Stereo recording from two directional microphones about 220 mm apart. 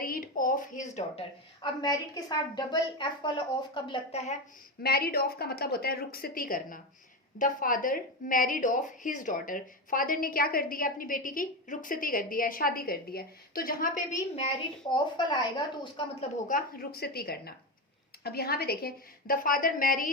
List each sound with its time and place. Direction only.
0.0 s a sound: 40° left (ahead or behind)
1.6 s a woman's voice: 20° left (ahead or behind)
4.8 s a woman's voice: 45° left (ahead or behind); by 15.9 s 20° left (ahead or behind)
16.5 s a woman's voice: 40° left (ahead or behind)